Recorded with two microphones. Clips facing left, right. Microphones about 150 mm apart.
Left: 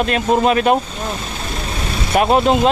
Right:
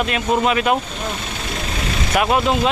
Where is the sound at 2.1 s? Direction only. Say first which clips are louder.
Left 4 dB; 35° left (ahead or behind).